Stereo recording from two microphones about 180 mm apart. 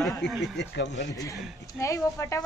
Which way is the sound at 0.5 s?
75° left (ahead or behind).